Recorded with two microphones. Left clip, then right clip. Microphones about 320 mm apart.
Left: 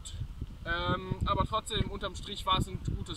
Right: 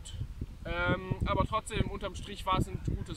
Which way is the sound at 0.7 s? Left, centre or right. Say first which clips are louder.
Even; centre.